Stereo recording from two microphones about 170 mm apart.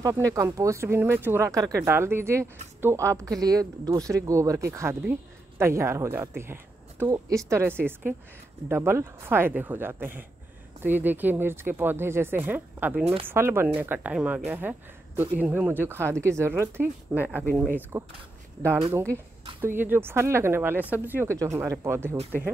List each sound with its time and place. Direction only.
0.0 s speech: 20° right (ahead or behind)
13.0 s speech: 30° right (ahead or behind)
13.3 s speech: 15° right (ahead or behind)
19.6 s speech: 10° right (ahead or behind)